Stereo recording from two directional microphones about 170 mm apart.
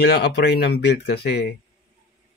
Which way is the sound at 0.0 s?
80° left.